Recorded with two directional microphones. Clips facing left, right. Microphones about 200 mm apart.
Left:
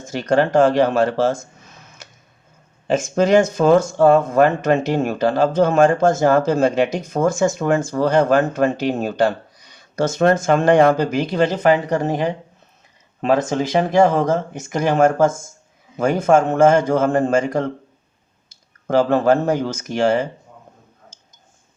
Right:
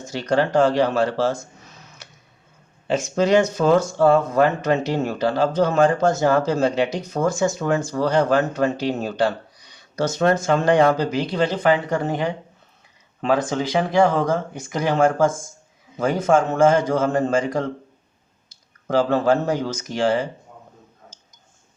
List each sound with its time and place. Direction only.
0.1 s speech: 50° left (ahead or behind)
2.8 s speech: 45° left (ahead or behind)
13.5 s speech: 45° left (ahead or behind)
18.9 s speech: 50° left (ahead or behind)